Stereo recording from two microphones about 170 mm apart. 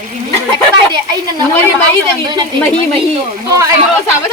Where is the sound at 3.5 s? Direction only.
20° right (ahead or behind).